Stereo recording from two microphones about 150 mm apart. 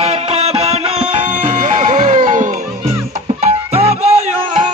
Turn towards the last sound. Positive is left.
turn(degrees=-45)  # may be behind; listen again after turning